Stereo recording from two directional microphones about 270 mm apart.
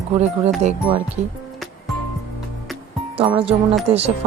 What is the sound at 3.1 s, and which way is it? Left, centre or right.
Speech, right.